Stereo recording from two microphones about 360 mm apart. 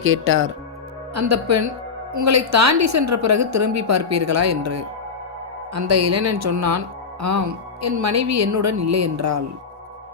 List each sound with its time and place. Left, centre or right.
0.0 s speech: right
1.1 s speech: right